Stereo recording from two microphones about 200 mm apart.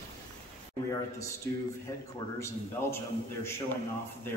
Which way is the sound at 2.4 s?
15° left (ahead or behind).